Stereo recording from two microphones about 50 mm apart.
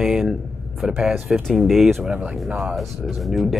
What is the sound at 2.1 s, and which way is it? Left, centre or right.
Speech, right.